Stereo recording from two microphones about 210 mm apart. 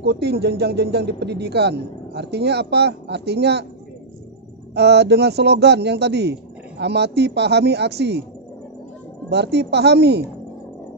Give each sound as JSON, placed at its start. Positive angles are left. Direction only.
{"t": 0.0, "sound": "speech", "side_deg": -50}
{"t": 4.7, "sound": "speech", "side_deg": -55}
{"t": 9.3, "sound": "speech", "side_deg": -55}